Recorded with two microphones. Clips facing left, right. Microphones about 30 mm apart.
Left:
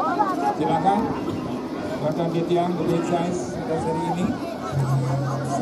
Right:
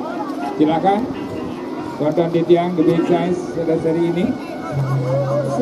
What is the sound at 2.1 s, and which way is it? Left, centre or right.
Speech, right.